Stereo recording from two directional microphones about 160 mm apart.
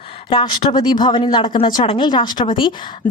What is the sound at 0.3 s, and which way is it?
Speech, 30° left (ahead or behind).